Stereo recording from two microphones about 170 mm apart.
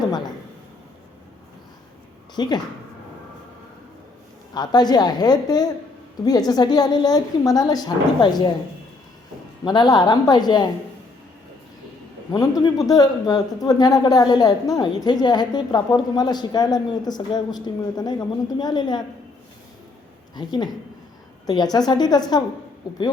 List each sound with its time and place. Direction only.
0.0 s a sound: 25° left (ahead or behind)
2.3 s speech: 25° left (ahead or behind)
4.5 s speech: 25° left (ahead or behind)
9.6 s speech: 25° left (ahead or behind)
12.3 s speech: 20° left (ahead or behind)
20.3 s speech: 25° left (ahead or behind)